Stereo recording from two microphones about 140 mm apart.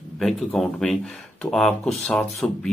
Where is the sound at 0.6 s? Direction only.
5° left (ahead or behind).